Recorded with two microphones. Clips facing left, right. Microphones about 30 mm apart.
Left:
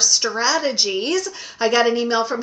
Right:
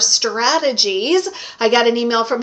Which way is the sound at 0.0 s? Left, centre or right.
Right.